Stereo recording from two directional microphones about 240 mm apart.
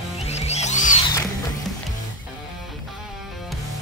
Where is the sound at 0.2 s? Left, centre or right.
Left.